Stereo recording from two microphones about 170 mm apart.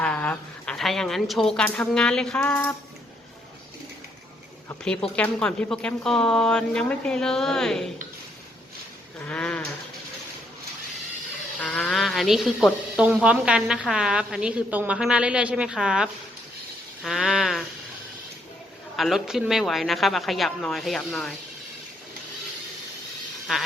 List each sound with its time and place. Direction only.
0.0 s a woman's voice: 10° left (ahead or behind)
5.0 s a woman's voice: 5° left (ahead or behind)
9.1 s sheep: 10° left (ahead or behind)
11.6 s a woman's voice: 5° left (ahead or behind)
18.9 s a woman's voice: centre (ahead or behind)